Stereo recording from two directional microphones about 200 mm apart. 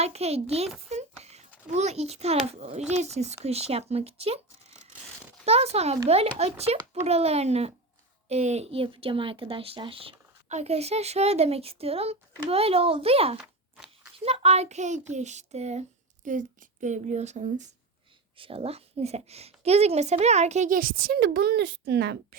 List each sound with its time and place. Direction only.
0.0 s a woman's voice: 30° right (ahead or behind)
0.9 s a sound: 35° right (ahead or behind)
2.5 s a woman's voice: 30° right (ahead or behind)
5.5 s a woman's voice: 30° right (ahead or behind)
13.4 s a sound: 5° right (ahead or behind)
14.3 s a woman's voice: 30° right (ahead or behind); by 22.4 s 55° right (ahead or behind)